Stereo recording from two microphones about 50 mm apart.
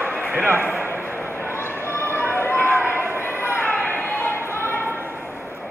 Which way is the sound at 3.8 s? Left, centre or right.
Left.